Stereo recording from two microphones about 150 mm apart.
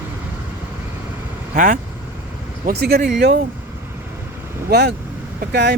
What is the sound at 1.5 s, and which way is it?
Speech, 60° right (ahead or behind).